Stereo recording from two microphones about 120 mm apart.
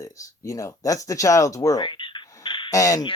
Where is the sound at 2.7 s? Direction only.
30° left (ahead or behind).